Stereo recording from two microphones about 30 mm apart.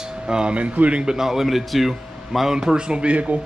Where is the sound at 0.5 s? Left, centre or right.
Right.